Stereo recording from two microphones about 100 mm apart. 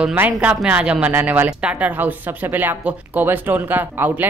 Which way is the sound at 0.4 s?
10° right (ahead or behind).